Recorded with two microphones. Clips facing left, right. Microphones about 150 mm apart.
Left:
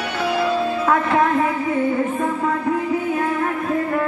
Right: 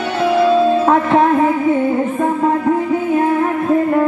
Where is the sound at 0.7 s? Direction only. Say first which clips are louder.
Right 6 dB; 25° right (ahead or behind).